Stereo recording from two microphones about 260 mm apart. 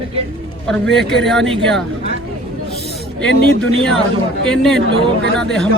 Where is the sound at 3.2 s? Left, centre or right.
Centre.